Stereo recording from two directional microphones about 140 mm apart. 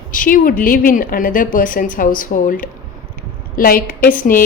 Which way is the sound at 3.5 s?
90° left.